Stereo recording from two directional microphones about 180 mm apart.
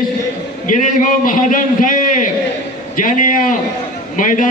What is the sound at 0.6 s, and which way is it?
A man's voice, 45° left (ahead or behind).